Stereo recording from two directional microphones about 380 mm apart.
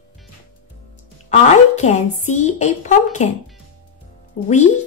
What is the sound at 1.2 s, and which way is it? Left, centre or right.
Speech, centre.